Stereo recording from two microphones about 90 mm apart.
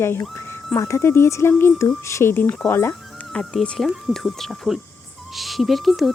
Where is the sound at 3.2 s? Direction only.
10° left (ahead or behind).